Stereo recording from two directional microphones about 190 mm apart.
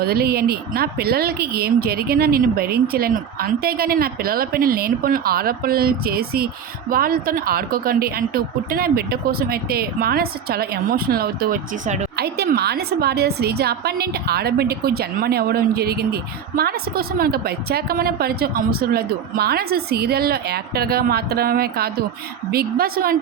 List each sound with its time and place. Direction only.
0.0 s a woman's voice: 55° right (ahead or behind)
12.1 s a woman's voice: 60° right (ahead or behind)